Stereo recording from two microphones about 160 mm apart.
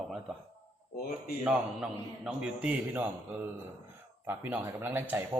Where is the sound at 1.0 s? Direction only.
70° left (ahead or behind).